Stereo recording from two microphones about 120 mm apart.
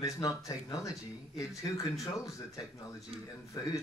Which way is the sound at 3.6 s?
35° left (ahead or behind).